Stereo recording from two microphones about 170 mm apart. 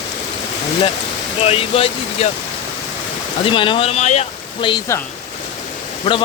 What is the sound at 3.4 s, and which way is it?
Speech, 30° left (ahead or behind).